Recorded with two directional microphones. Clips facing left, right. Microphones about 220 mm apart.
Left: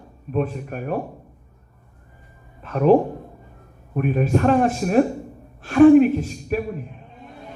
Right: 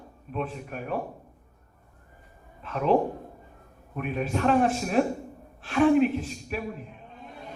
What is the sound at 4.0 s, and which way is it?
A man's voice, 45° left (ahead or behind).